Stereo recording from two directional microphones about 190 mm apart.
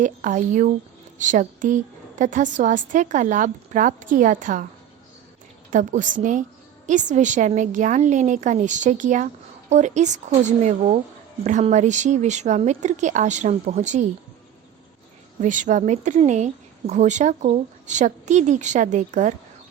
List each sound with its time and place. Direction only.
0.0 s a woman's voice: 40° right (ahead or behind)
5.7 s a woman's voice: 40° right (ahead or behind)
15.4 s a woman's voice: 40° right (ahead or behind)